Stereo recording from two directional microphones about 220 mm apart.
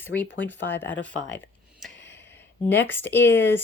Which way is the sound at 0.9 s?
55° left (ahead or behind).